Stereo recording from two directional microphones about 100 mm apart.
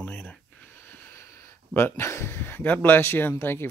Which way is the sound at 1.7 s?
25° left (ahead or behind).